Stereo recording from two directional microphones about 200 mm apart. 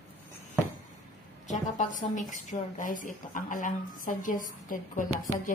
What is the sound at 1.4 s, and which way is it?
A woman's voice, 40° left (ahead or behind).